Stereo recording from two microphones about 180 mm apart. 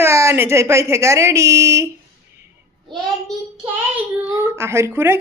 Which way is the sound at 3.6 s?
10° right (ahead or behind).